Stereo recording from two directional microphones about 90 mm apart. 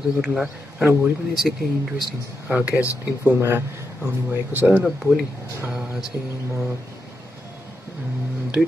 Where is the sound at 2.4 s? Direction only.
15° right (ahead or behind).